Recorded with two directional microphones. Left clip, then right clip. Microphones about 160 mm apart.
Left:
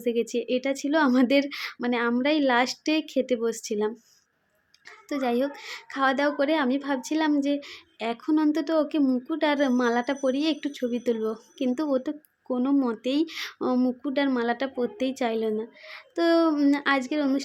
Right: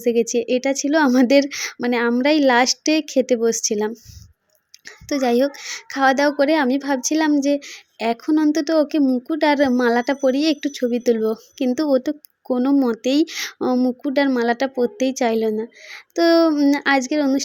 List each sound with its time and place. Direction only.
0.0 s speech: 30° right (ahead or behind)